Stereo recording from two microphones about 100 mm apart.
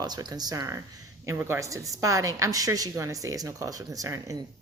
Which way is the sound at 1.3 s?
25° right (ahead or behind).